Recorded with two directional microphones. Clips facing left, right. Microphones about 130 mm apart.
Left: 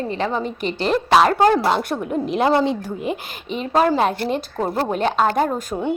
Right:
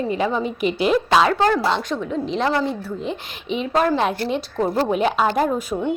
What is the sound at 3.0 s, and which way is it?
A woman's voice, centre (ahead or behind).